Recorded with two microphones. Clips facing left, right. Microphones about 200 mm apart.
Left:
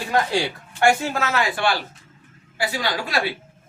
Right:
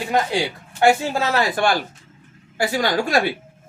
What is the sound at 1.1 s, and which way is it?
A woman's voice, 30° right (ahead or behind).